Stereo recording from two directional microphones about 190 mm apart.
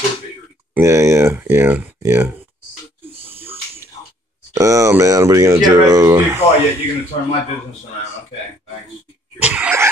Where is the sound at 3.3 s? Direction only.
30° right (ahead or behind).